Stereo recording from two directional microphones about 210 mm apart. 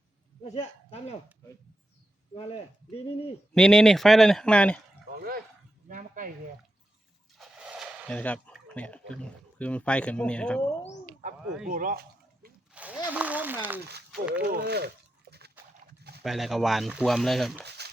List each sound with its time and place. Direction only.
0.5 s speech: 30° left (ahead or behind)
2.3 s speech: 30° left (ahead or behind)
3.5 s speech: centre (ahead or behind)
5.1 s a sound: 45° right (ahead or behind)
7.3 s speech: 5° right (ahead or behind)
11.7 s a sound: 40° right (ahead or behind)
12.7 s a sound: 5° right (ahead or behind)
14.1 s speech: 5° right (ahead or behind)
14.4 s speech: 50° right (ahead or behind)
15.3 s dog: 50° right (ahead or behind)
16.0 s clip-clop: 50° right (ahead or behind)
16.2 s speech: centre (ahead or behind)
17.7 s a sound: 50° right (ahead or behind)